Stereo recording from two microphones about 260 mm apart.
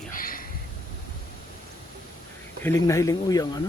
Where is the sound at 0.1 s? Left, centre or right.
Left.